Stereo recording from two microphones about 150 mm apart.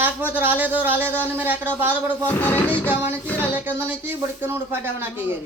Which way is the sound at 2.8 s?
15° right (ahead or behind).